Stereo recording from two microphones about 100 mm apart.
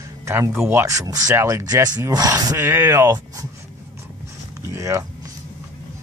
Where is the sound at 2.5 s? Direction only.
25° right (ahead or behind).